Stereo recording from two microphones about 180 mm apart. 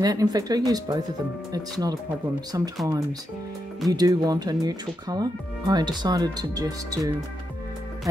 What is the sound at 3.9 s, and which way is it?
Speech, 20° right (ahead or behind).